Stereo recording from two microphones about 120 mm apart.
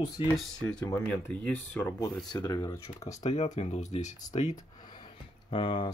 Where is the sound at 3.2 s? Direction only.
70° left (ahead or behind).